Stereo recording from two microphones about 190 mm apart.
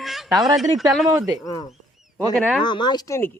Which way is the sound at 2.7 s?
25° left (ahead or behind).